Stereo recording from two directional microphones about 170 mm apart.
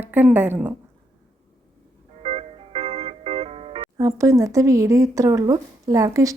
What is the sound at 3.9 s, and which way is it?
Speech, 20° right (ahead or behind).